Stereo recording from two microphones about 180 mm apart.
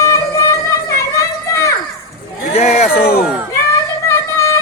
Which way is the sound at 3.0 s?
60° left (ahead or behind).